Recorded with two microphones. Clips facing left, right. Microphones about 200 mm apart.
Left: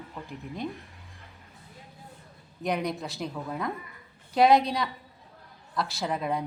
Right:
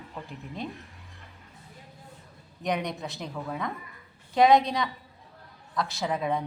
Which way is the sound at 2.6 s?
Centre (ahead or behind).